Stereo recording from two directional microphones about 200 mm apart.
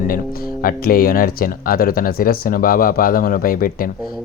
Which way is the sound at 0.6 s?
45° left (ahead or behind).